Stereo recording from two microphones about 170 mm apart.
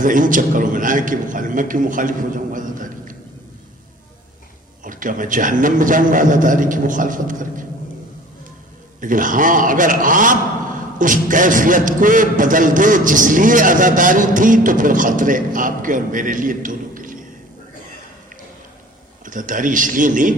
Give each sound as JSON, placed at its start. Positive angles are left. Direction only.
{"t": 0.0, "sound": "a man's voice", "side_deg": -50}
{"t": 4.8, "sound": "a man's voice", "side_deg": -50}
{"t": 9.0, "sound": "a man's voice", "side_deg": -50}
{"t": 19.2, "sound": "a man's voice", "side_deg": -50}